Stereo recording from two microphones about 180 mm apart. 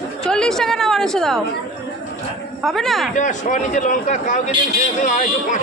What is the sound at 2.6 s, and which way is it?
Speech, centre (ahead or behind).